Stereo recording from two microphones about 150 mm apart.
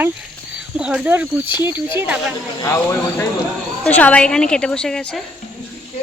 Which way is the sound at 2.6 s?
20° left (ahead or behind).